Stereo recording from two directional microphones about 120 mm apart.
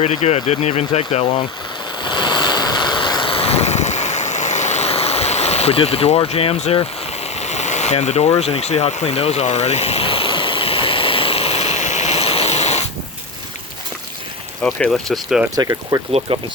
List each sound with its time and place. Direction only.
0.0 s speech: 65° left (ahead or behind)
2.0 s waves: 40° left (ahead or behind)
7.3 s a sound: 70° left (ahead or behind)
8.4 s vehicle: 60° left (ahead or behind)
14.6 s speech: 10° left (ahead or behind)
15.5 s speech: 30° right (ahead or behind)
16.3 s speech: 50° right (ahead or behind)